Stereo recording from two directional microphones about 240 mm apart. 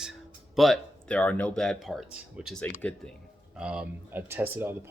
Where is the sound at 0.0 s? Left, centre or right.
Centre.